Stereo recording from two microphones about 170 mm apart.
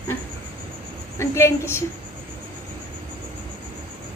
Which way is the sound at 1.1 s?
15° left (ahead or behind).